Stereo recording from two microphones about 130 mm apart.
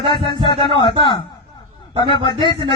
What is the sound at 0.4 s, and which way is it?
Speech, 35° left (ahead or behind).